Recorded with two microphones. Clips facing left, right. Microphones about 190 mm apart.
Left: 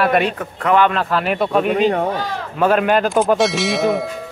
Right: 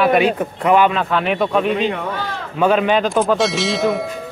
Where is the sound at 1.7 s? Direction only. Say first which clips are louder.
Left 4 dB; 40° left (ahead or behind).